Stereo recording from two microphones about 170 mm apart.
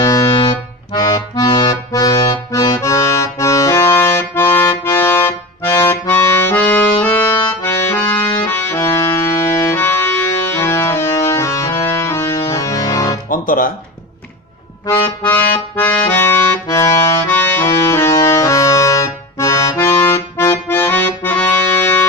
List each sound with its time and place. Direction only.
0.0 s music: 20° left (ahead or behind)
0.9 s accordion: 25° left (ahead or behind)
13.3 s music: 55° left (ahead or behind)
14.8 s music: 20° left (ahead or behind)
15.7 s accordion: 15° left (ahead or behind)